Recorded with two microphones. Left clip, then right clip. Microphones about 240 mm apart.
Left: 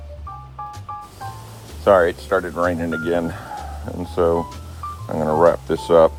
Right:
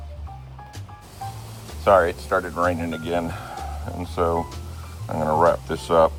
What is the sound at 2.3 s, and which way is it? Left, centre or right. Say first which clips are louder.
Speech: left 3 dB; left.